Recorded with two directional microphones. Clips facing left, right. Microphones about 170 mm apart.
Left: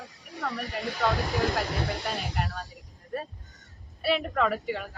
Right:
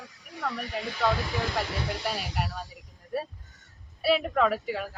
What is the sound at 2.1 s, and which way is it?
A woman's voice, 5° right (ahead or behind).